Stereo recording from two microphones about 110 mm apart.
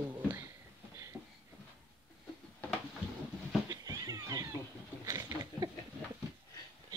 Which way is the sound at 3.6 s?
30° right (ahead or behind).